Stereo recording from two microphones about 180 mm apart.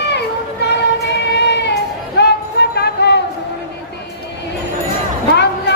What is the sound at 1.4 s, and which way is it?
Child singing, 70° left (ahead or behind).